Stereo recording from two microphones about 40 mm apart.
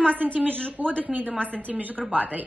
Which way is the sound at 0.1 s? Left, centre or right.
Right.